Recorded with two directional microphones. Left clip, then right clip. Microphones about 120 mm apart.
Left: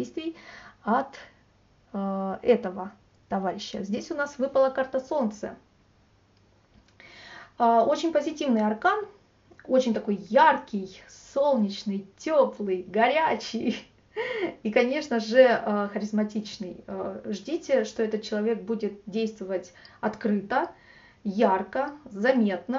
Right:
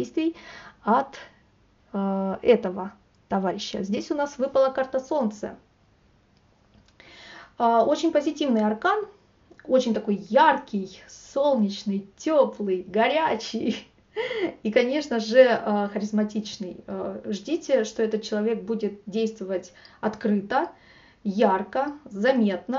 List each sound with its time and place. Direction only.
0.0 s a sound: 45° right (ahead or behind)
1.9 s speech: 45° right (ahead or behind)
7.0 s speech: 35° right (ahead or behind)